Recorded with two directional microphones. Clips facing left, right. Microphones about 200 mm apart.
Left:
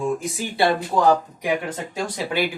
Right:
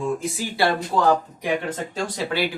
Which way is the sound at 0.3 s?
20° left (ahead or behind).